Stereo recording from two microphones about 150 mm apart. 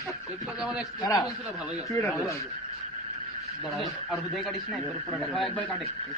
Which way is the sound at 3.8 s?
Centre (ahead or behind).